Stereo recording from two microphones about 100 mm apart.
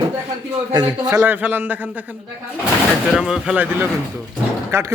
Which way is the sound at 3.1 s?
Centre (ahead or behind).